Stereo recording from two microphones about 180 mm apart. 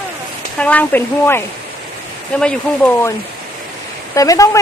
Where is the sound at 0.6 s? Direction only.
10° left (ahead or behind).